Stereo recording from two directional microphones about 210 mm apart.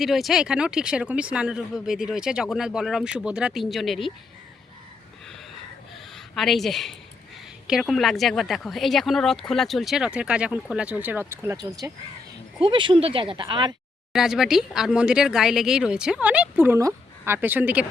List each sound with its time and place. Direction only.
0.0 s speech: centre (ahead or behind)
6.1 s speech: centre (ahead or behind); by 13.7 s 20° right (ahead or behind)
14.1 s speech: centre (ahead or behind)